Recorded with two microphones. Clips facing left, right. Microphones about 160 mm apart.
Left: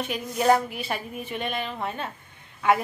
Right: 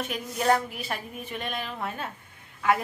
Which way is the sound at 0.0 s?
Centre (ahead or behind).